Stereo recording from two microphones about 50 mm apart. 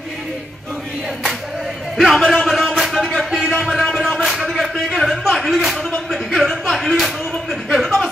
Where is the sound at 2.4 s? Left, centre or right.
Centre.